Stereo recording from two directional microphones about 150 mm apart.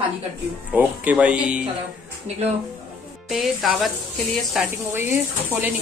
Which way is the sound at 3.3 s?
Centre (ahead or behind).